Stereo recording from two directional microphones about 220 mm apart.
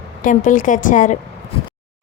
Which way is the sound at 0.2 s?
35° left (ahead or behind).